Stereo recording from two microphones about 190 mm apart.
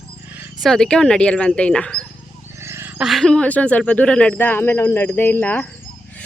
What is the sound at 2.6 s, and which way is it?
Wild animals, 15° right (ahead or behind).